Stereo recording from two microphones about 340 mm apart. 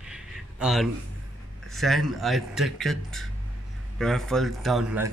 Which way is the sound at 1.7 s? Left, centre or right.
Centre.